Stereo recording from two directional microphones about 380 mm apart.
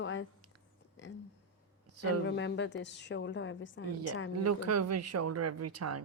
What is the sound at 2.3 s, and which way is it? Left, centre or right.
A woman's voice, left.